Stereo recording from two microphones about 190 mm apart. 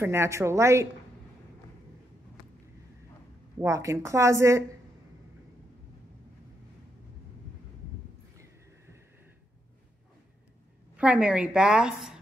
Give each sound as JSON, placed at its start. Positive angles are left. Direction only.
{"t": 0.0, "sound": "a woman's voice", "side_deg": -15}
{"t": 3.5, "sound": "a woman's voice", "side_deg": -15}
{"t": 11.0, "sound": "a woman's voice", "side_deg": -5}